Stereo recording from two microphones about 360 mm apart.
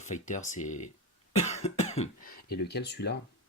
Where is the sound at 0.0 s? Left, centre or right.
Centre.